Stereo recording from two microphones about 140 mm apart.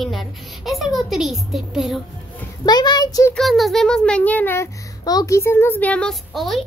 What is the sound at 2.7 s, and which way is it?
Speech, 30° left (ahead or behind).